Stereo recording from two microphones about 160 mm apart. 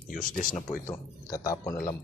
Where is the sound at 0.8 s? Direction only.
20° left (ahead or behind).